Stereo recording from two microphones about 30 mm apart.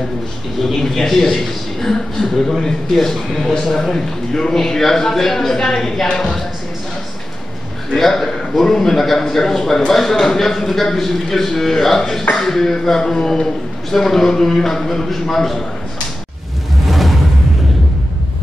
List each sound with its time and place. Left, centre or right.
0.7 s a man's voice: centre
3.9 s a man's voice: centre
7.9 s a man's voice: centre
16.8 s music: centre